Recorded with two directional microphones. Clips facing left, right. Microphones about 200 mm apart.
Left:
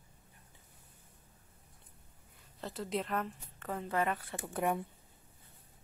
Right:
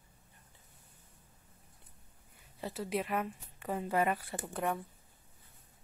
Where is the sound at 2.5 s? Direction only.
10° right (ahead or behind).